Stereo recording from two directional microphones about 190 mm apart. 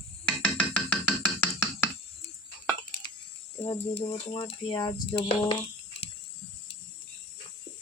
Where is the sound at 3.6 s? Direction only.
35° left (ahead or behind).